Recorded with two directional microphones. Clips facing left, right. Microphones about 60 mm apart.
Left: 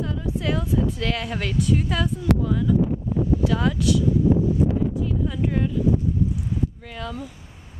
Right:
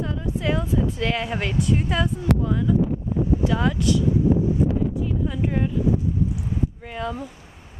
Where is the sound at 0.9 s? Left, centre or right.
Centre.